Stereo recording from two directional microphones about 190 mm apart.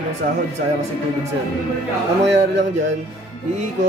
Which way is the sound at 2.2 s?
70° right (ahead or behind).